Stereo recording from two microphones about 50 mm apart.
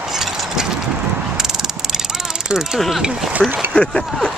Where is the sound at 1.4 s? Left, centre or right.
Centre.